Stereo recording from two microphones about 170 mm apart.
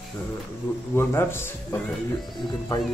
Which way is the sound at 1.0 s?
15° left (ahead or behind).